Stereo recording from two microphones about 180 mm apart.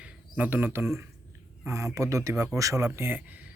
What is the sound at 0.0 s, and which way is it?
Speech, 10° right (ahead or behind).